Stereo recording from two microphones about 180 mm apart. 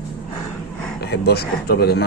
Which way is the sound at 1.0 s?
60° left (ahead or behind).